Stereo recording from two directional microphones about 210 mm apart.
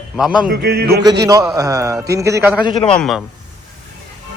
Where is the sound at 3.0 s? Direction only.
Centre (ahead or behind).